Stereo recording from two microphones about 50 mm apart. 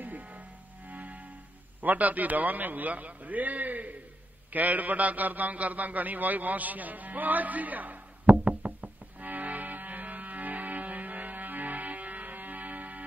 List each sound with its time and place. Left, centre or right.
0.0 s music: right
1.8 s a man's voice: right
4.5 s a sound: right